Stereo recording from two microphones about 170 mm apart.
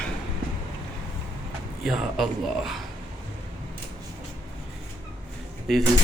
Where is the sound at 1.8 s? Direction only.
Centre (ahead or behind).